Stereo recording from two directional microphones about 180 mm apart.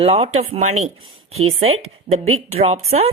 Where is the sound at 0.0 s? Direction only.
35° right (ahead or behind).